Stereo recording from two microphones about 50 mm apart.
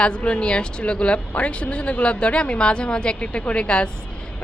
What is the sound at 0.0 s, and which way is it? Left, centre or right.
Speech, left.